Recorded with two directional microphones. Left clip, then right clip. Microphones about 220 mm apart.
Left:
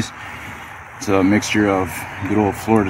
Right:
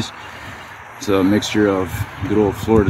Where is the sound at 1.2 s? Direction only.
20° left (ahead or behind).